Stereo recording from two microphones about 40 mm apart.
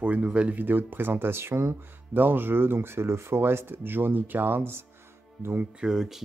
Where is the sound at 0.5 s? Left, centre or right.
Right.